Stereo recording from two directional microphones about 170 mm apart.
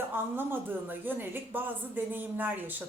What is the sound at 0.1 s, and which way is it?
A woman's voice, 10° right (ahead or behind).